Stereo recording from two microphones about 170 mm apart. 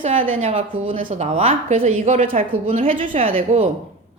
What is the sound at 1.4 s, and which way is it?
A woman's voice, 35° right (ahead or behind).